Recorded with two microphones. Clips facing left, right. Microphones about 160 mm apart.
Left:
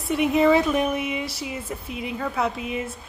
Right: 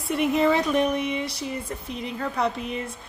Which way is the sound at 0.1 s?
Centre (ahead or behind).